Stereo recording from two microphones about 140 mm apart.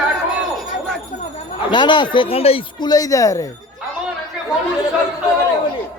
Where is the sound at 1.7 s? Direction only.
35° left (ahead or behind).